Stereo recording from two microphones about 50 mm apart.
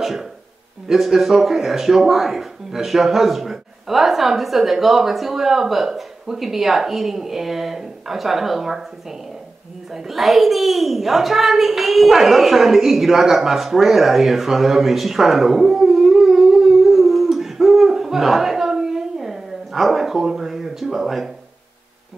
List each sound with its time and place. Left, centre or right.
0.0 s speech: centre
9.9 s a child's voice: centre